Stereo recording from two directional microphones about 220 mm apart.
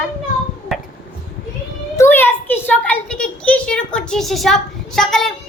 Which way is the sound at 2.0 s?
10° left (ahead or behind).